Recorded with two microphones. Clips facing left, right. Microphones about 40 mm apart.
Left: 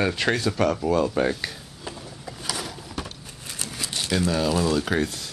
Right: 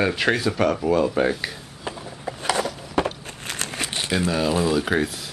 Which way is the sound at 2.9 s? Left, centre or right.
Right.